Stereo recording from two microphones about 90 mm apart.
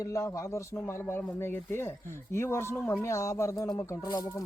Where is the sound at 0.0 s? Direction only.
40° left (ahead or behind).